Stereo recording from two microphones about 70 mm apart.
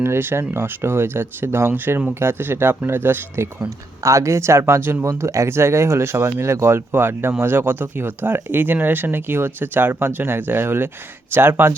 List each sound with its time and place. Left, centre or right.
0.0 s speech: right
4.0 s speech: right
5.0 s speech: right